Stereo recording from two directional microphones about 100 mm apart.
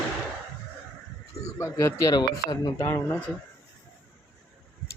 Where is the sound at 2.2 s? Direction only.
45° left (ahead or behind).